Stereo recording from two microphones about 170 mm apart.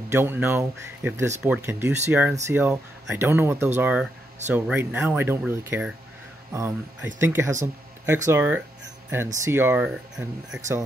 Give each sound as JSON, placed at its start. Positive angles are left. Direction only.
{"t": 0.1, "sound": "speech", "side_deg": -15}
{"t": 7.6, "sound": "a sound", "side_deg": -15}
{"t": 8.3, "sound": "speech", "side_deg": -10}